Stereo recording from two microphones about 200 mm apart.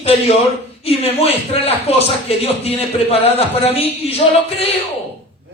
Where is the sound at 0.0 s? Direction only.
30° left (ahead or behind).